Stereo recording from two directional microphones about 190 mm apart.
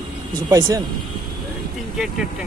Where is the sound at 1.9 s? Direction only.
Centre (ahead or behind).